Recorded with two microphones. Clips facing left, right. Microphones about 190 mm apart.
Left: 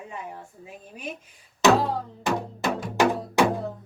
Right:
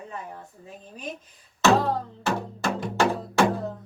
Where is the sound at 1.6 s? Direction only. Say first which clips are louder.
Left 1 dB; 15° left (ahead or behind).